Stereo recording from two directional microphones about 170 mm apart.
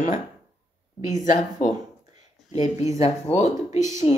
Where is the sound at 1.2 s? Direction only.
50° left (ahead or behind).